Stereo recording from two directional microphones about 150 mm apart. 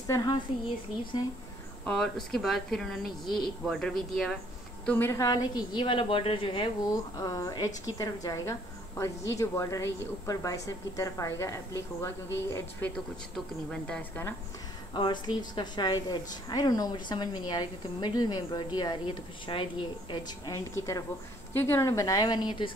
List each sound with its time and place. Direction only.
0.0 s a woman's voice: 25° left (ahead or behind)
1.9 s speech: 5° left (ahead or behind)
4.8 s speech: 15° left (ahead or behind)
5.2 s a woman's voice: 25° left (ahead or behind)
7.2 s a woman's voice: 25° left (ahead or behind)
15.0 s a woman's voice: 35° left (ahead or behind)